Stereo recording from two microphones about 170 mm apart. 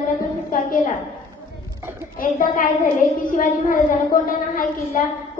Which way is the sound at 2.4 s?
55° left (ahead or behind).